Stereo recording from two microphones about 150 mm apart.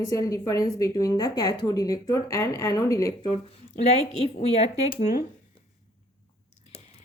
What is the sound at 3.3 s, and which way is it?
Speech, 45° left (ahead or behind).